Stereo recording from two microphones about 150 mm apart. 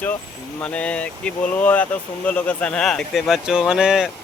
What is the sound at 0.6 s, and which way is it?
Speech, 10° left (ahead or behind).